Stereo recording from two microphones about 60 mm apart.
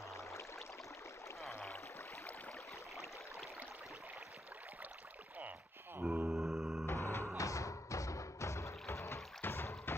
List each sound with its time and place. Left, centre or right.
0.1 s a sound: left
6.0 s mantra: right
6.3 s music: centre
6.9 s music: left
7.3 s music: left
9.4 s rowboat: left